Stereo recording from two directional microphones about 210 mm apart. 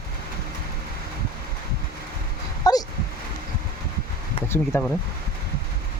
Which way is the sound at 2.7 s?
20° left (ahead or behind).